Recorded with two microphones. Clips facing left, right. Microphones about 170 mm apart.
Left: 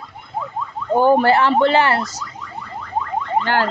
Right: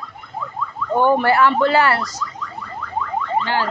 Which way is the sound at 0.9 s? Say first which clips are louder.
Left 2 dB; 35° left (ahead or behind).